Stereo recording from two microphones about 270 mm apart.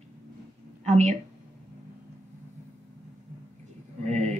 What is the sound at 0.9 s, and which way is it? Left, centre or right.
Speech, right.